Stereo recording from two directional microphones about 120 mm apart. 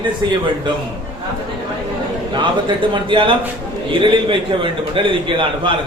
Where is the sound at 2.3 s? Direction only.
40° right (ahead or behind).